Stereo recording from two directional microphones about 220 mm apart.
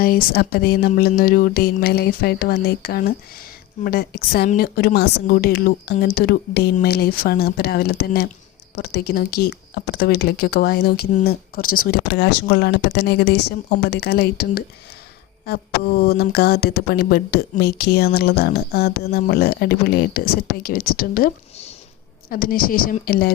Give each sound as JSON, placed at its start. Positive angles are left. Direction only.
{"t": 0.0, "sound": "a woman's voice", "side_deg": 40}